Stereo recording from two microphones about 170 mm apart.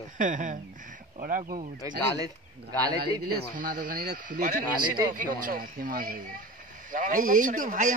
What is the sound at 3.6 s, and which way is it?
A man's voice, 55° right (ahead or behind).